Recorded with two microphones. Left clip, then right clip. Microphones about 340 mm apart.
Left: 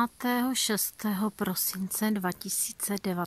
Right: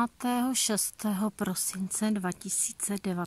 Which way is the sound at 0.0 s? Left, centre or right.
Centre.